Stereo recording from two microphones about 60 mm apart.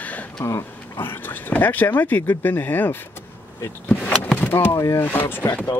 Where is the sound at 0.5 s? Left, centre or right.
Left.